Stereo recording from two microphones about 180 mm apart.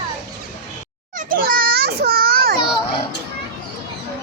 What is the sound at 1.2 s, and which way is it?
Children playing, 50° right (ahead or behind).